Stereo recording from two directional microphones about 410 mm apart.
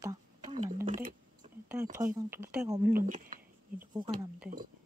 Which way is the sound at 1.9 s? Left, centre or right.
Centre.